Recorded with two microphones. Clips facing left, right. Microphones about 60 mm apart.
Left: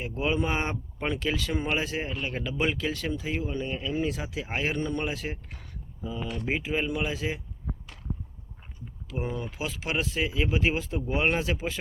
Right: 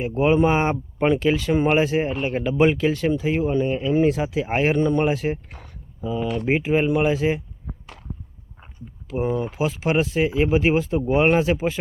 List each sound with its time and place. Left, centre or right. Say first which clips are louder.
0.2 s speech: right 10 dB; right
3.7 s speech: right 9 dB; right
3.9 s speech: right 12 dB; right
5.5 s speech: right 4 dB; right
6.0 s speech: right 9 dB; right
6.4 s speech: right 8 dB; right
8.6 s speech: right 4 dB; right